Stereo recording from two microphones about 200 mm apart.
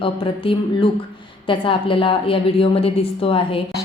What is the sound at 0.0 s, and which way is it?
A woman's voice, 25° left (ahead or behind).